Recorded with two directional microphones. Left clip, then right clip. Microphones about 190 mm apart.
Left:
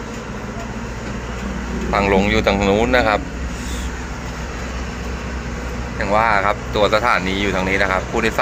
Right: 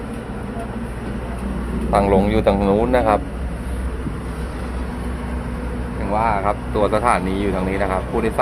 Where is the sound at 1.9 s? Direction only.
15° right (ahead or behind).